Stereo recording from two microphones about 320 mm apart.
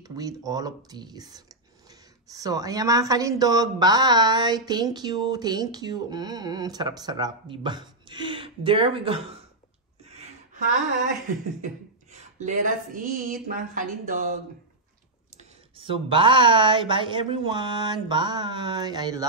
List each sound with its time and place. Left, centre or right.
0.0 s speech: centre
10.0 s a sound: centre
11.6 s speech: right
15.3 s speech: centre